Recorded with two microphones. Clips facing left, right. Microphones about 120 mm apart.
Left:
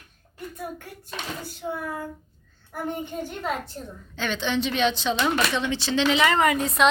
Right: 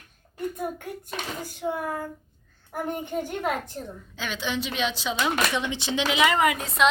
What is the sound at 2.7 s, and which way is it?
A child's voice, 15° right (ahead or behind).